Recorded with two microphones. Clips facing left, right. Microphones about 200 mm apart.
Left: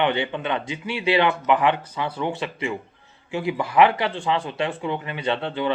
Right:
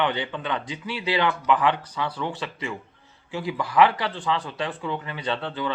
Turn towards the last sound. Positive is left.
turn(degrees=20)  # may be behind; listen again after turning